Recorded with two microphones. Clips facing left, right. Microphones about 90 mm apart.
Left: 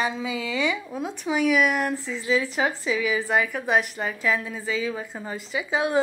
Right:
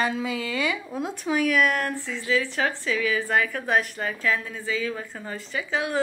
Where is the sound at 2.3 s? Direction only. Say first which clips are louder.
Even; 15° left (ahead or behind).